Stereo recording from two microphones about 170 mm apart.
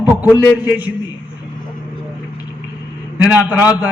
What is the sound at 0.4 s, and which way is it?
Speech, 20° left (ahead or behind).